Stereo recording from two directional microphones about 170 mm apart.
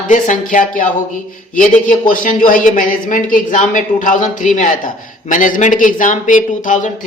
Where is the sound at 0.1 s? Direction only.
50° left (ahead or behind).